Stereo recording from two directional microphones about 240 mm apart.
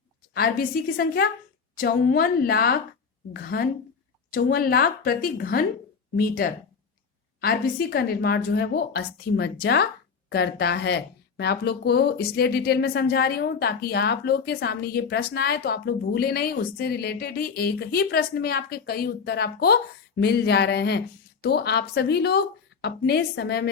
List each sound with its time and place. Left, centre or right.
0.3 s speech: left